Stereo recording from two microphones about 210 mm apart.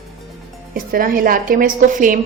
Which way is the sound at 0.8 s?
40° right (ahead or behind).